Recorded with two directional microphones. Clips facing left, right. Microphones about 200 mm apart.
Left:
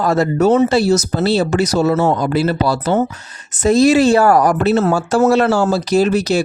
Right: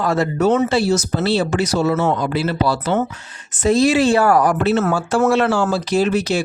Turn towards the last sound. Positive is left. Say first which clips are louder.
# left 3 dB
turn(degrees=40)  # may be behind; listen again after turning